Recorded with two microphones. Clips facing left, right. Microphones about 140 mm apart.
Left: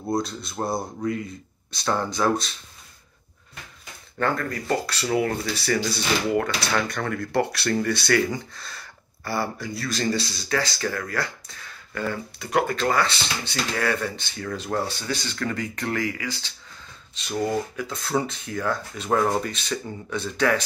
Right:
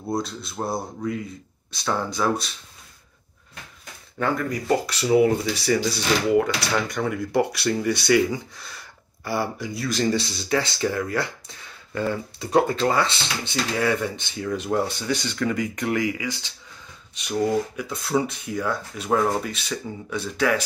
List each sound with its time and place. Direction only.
0.1 s speech: centre (ahead or behind)
4.2 s speech: 15° right (ahead or behind)